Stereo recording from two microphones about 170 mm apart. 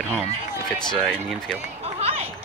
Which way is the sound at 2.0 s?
35° right (ahead or behind).